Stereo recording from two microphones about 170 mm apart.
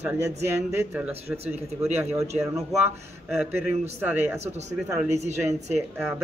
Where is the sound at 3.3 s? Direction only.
10° right (ahead or behind).